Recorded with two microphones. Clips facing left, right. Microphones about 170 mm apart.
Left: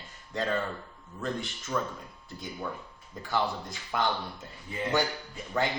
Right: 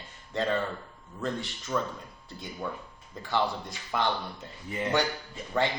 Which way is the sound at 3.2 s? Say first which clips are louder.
Right 1 dB; centre (ahead or behind).